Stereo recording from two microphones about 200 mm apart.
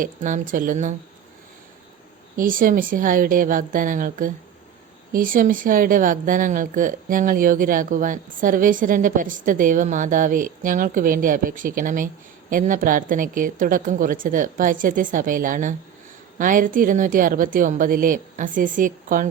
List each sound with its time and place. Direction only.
0.0 s a woman's voice: 40° right (ahead or behind)
2.3 s a woman's voice: 45° right (ahead or behind)